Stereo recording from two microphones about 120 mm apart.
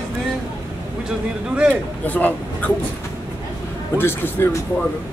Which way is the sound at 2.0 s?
15° left (ahead or behind).